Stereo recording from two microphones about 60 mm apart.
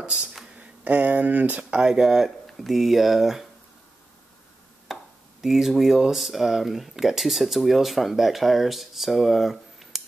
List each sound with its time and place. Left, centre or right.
0.0 s speech: centre
1.7 s speech: centre
4.9 s a sound: centre
5.4 s speech: centre